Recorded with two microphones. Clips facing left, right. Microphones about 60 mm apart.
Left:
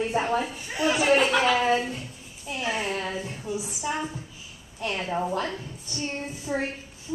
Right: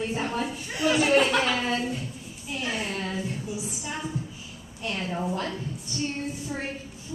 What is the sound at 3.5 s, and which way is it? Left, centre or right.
Speech, centre.